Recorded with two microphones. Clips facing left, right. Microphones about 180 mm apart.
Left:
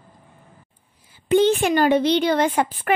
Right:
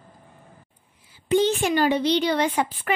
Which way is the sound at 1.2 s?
55° left (ahead or behind).